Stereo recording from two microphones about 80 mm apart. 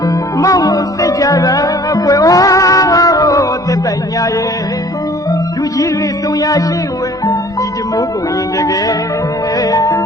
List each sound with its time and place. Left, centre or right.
0.3 s music: left
5.3 s music: left
8.5 s music: left